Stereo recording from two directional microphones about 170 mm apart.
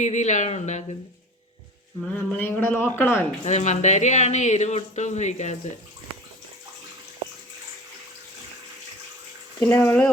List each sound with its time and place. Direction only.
0.0 s speech: 45° left (ahead or behind)
2.1 s a man's voice: 10° left (ahead or behind)
3.4 s speech: 45° left (ahead or behind)
9.6 s a man's voice: 10° left (ahead or behind)